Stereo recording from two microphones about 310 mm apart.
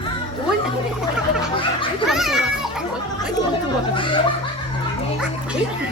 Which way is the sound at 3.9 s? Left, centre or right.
Centre.